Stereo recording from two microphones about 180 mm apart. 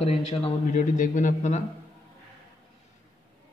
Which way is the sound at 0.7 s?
45° left (ahead or behind).